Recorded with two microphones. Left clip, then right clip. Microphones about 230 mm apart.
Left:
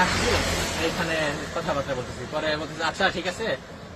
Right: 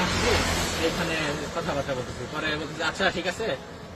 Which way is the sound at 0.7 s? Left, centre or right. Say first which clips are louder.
Even; left.